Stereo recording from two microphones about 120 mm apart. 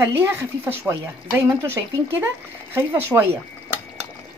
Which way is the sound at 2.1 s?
20° right (ahead or behind).